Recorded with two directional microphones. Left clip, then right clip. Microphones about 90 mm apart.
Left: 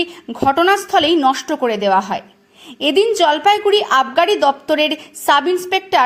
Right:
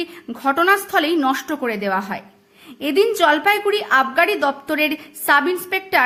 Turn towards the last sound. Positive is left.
turn(degrees=35)  # may be behind; listen again after turning